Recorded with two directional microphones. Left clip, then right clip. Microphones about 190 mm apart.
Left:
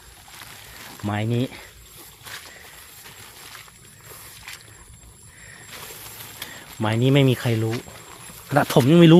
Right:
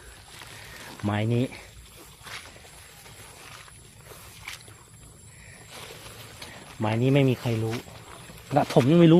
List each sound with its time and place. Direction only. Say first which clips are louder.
1.0 s speech: left 1 dB; 5° left (ahead or behind)
1.4 s speech: left 2 dB; 15° left (ahead or behind)
6.8 s speech: left 4 dB; 25° left (ahead or behind)